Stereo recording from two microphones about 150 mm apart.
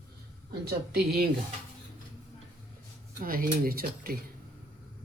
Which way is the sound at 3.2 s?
75° right (ahead or behind).